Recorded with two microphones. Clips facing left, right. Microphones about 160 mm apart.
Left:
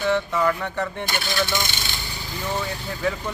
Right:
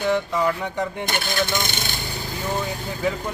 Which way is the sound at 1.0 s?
50° right (ahead or behind).